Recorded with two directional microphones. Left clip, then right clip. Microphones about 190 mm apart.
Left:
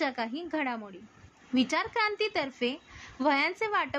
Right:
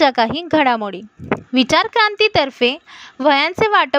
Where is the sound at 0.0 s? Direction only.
50° right (ahead or behind).